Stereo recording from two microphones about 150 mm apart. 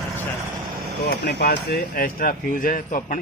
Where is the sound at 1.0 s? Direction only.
90° left.